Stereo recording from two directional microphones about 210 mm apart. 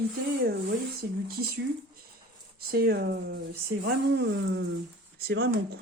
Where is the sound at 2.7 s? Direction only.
45° right (ahead or behind).